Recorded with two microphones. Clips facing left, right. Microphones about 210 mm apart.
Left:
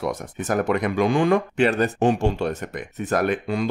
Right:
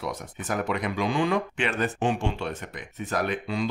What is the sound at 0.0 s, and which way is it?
Speech, 45° left (ahead or behind).